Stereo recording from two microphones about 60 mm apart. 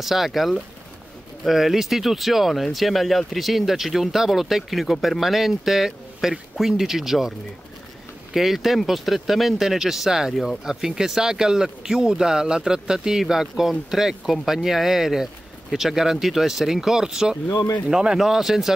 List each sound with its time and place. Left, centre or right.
0.0 s speech: centre
17.5 s speech: left
17.8 s speech: centre